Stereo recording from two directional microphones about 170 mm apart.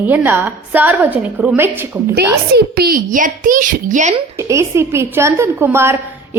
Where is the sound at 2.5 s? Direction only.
65° right (ahead or behind); by 4.2 s 45° right (ahead or behind).